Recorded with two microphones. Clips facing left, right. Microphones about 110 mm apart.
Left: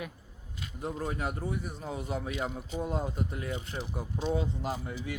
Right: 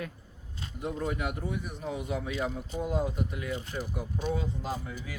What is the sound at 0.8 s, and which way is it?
Speech, 35° left (ahead or behind).